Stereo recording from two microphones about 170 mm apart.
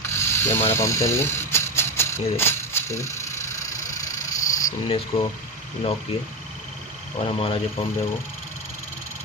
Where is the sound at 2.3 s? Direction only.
15° left (ahead or behind).